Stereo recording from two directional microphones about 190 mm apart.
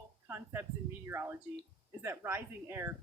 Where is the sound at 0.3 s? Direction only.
10° right (ahead or behind).